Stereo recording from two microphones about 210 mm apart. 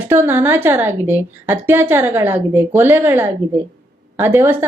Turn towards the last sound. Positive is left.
turn(degrees=-10)  # may be behind; listen again after turning